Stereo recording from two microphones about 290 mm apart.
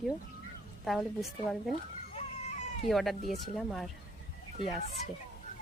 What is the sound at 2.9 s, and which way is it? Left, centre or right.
Speech, centre.